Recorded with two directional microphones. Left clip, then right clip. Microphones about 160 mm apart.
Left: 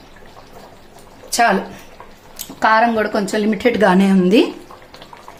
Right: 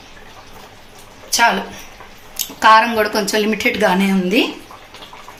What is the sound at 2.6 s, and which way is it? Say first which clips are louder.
A woman's voice: right 3 dB; 40° left (ahead or behind).